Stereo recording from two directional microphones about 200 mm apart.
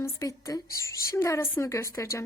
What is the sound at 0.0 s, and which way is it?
Speech, 15° left (ahead or behind).